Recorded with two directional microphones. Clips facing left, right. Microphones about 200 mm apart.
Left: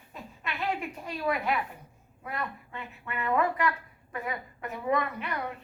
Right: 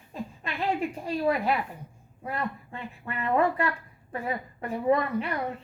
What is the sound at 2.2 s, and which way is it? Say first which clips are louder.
Speech: right 4 dB; 30° right (ahead or behind).